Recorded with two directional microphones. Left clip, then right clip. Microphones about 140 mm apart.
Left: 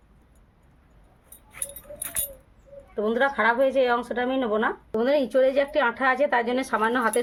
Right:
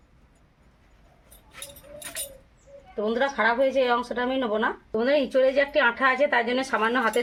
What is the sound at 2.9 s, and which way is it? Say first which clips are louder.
Speech: left 2 dB; 25° left (ahead or behind).